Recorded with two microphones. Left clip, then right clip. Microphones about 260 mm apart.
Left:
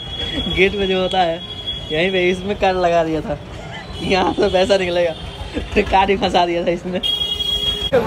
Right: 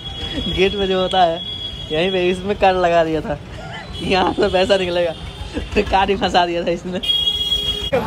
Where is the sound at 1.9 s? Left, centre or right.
Centre.